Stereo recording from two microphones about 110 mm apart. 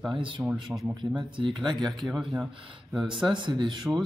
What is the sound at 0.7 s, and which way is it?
Speech, 15° right (ahead or behind).